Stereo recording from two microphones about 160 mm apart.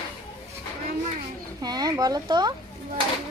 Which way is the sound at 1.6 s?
25° right (ahead or behind).